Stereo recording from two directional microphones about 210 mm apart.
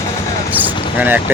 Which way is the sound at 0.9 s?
10° right (ahead or behind).